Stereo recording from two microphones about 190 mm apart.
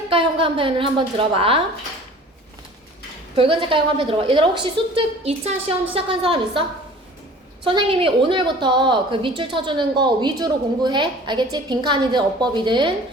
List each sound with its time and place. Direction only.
0.1 s a woman's voice: 30° right (ahead or behind)
3.3 s a woman's voice: 25° right (ahead or behind)